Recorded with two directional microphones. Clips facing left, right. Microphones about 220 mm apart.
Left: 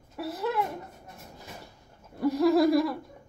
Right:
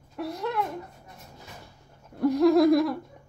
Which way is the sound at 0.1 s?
5° left (ahead or behind).